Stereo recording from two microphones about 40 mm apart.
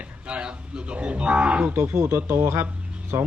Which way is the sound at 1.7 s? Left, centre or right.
Right.